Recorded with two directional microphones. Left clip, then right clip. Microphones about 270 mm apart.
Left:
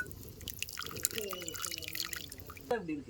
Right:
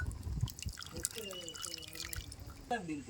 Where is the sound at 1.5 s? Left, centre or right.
Centre.